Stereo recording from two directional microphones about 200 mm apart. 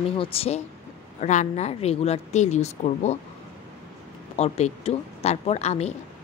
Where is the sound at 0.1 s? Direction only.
30° left (ahead or behind).